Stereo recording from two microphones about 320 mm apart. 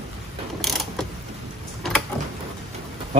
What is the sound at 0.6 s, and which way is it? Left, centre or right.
Mechanisms, centre.